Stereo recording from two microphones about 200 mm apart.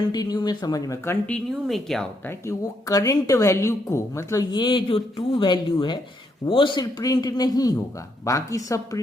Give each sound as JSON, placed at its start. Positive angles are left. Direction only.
{"t": 0.1, "sound": "speech", "side_deg": 20}
{"t": 1.6, "sound": "speech", "side_deg": 0}
{"t": 2.5, "sound": "speech", "side_deg": 15}